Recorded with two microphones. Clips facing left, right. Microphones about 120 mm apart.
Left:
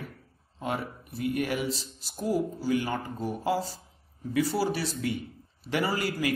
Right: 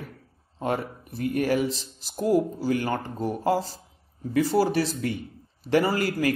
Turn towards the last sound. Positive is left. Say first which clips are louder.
# right 4 dB
turn(degrees=-45)  # may be behind; listen again after turning